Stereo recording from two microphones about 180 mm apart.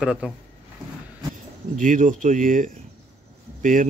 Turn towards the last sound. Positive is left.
turn(degrees=-45)  # may be behind; listen again after turning